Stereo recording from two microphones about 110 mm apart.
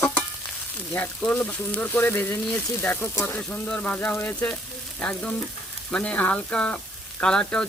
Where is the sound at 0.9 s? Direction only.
10° left (ahead or behind).